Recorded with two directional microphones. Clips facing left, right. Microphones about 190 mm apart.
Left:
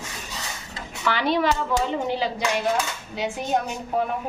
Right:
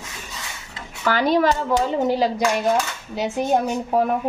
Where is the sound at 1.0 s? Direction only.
45° right (ahead or behind).